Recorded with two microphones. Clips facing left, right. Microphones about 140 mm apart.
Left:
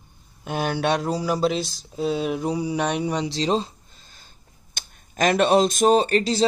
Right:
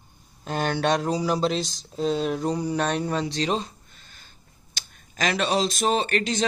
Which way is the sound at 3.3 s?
30° left (ahead or behind).